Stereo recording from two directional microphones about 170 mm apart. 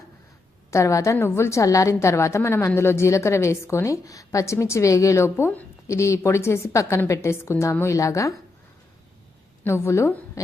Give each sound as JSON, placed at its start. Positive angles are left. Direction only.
{"t": 0.7, "sound": "a woman's voice", "side_deg": 15}
{"t": 9.6, "sound": "a woman's voice", "side_deg": 15}